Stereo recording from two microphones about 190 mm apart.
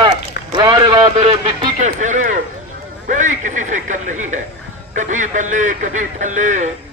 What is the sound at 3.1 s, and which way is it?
A man's voice, 40° right (ahead or behind).